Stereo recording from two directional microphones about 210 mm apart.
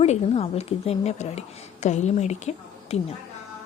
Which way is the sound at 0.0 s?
30° left (ahead or behind).